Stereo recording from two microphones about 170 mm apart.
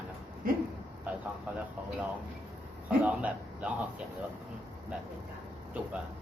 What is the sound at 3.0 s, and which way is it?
Speech, 10° right (ahead or behind).